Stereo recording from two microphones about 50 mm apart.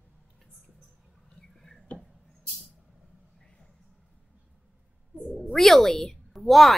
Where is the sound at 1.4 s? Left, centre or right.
Centre.